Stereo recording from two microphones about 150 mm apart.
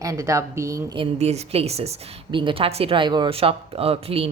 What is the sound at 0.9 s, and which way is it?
A woman's voice, 40° right (ahead or behind).